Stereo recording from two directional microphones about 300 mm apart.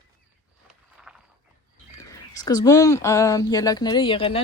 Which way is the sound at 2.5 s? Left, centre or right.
Centre.